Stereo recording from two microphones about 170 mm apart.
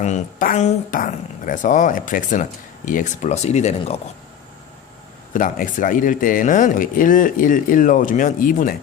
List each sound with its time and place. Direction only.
0.0 s speech: 50° left (ahead or behind)
5.3 s speech: 50° left (ahead or behind)